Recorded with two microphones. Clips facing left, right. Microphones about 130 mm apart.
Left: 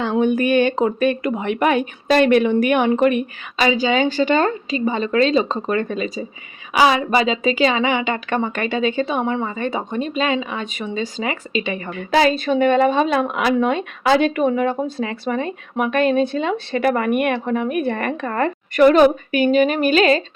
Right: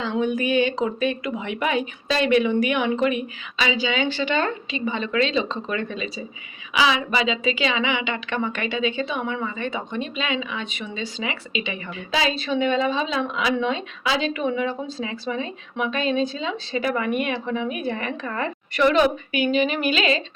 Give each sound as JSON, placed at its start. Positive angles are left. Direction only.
{"t": 0.2, "sound": "a woman's voice", "side_deg": 55}